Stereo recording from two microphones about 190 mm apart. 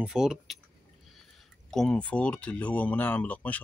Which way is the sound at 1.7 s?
5° left (ahead or behind).